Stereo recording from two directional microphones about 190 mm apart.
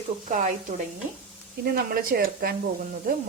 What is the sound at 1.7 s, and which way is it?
Stir, 50° right (ahead or behind).